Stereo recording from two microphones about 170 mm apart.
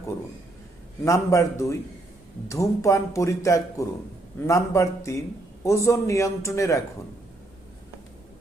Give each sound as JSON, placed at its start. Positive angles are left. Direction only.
{"t": 1.0, "sound": "speech", "side_deg": 20}